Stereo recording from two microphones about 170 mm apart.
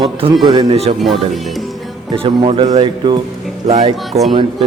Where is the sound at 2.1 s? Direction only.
35° right (ahead or behind).